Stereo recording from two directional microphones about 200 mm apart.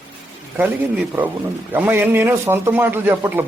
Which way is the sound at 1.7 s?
10° right (ahead or behind).